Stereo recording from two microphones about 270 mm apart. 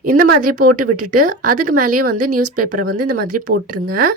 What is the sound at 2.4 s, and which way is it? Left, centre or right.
A woman's voice, right.